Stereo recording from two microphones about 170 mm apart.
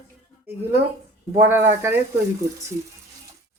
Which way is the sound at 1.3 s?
15° right (ahead or behind).